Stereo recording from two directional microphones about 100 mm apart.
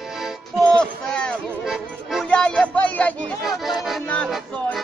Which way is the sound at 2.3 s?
10° left (ahead or behind).